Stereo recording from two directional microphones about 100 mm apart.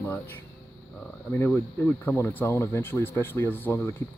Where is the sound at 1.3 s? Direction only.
20° left (ahead or behind).